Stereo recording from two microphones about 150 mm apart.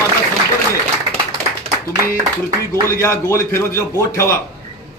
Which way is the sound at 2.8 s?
20° left (ahead or behind).